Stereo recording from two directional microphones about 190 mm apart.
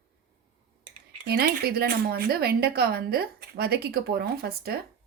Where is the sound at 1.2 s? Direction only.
55° right (ahead or behind).